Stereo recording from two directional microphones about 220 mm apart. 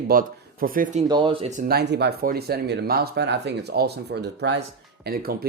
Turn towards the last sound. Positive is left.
turn(degrees=-45)  # may be behind; listen again after turning